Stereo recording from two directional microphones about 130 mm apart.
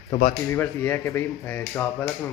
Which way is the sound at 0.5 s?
15° left (ahead or behind).